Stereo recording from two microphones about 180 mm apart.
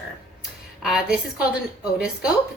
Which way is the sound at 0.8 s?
Centre (ahead or behind).